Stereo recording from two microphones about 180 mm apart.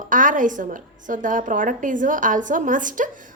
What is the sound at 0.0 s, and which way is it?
A woman's voice, 45° right (ahead or behind).